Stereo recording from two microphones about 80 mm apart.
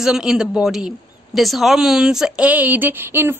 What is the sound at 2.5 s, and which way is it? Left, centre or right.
Speech, right.